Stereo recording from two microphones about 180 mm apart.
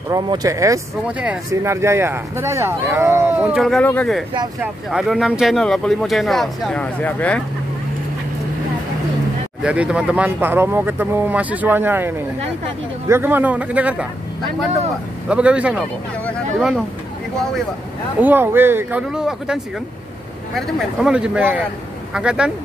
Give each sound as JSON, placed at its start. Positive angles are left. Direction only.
{"t": 0.1, "sound": "speech", "side_deg": -20}
{"t": 1.0, "sound": "speech", "side_deg": -5}
{"t": 4.6, "sound": "speech", "side_deg": -5}
{"t": 9.6, "sound": "speech", "side_deg": -5}
{"t": 15.2, "sound": "speech", "side_deg": -5}
{"t": 18.2, "sound": "speech", "side_deg": -10}